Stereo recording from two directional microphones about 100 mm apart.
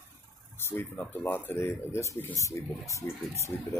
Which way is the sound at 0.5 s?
25° left (ahead or behind).